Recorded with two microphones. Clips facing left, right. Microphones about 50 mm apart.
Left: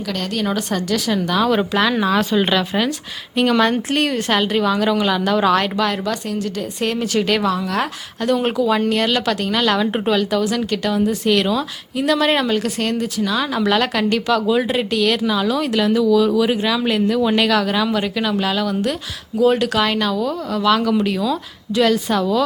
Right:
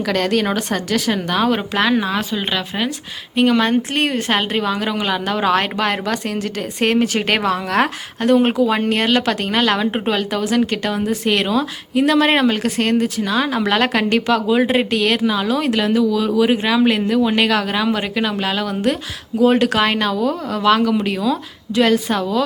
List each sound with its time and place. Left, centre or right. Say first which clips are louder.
0.1 s a woman's voice: right 4 dB; right
0.5 s a woman's voice: right 1 dB; right
5.7 s a woman's voice: even; right
8.3 s a woman's voice: right 3 dB; centre
9.6 s a woman's voice: even; centre